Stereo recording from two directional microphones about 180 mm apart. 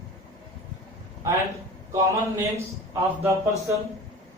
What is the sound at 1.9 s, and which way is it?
A man's voice, 15° right (ahead or behind).